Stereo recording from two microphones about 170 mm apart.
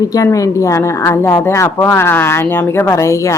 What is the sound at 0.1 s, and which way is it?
Speech, 20° left (ahead or behind).